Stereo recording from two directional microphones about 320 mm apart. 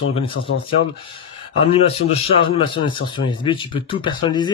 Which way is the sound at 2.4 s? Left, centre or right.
Centre.